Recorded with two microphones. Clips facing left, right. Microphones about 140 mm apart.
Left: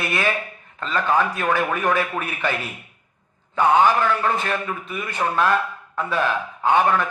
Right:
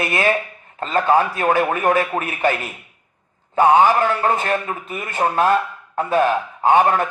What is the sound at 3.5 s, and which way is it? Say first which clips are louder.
A man's voice: right 3 dB; 45° right (ahead or behind).